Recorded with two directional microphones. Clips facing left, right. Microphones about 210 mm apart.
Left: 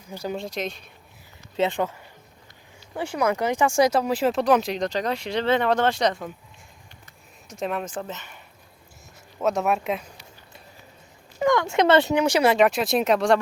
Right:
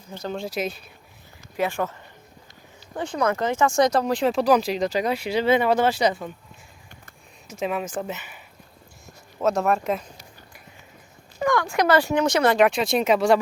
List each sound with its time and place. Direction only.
0.1 s speech: 10° left (ahead or behind)
0.3 s speech: 5° right (ahead or behind)
1.5 s speech: 20° left (ahead or behind); by 6.3 s 5° right (ahead or behind)
7.4 s speech: centre (ahead or behind)
9.4 s speech: centre (ahead or behind)
11.3 s speech: 20° left (ahead or behind); by 13.4 s 5° right (ahead or behind)